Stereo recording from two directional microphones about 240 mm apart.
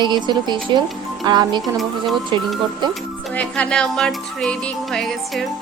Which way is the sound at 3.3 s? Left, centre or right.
Centre.